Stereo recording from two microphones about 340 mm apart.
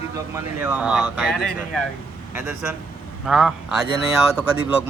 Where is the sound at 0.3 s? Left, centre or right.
Centre.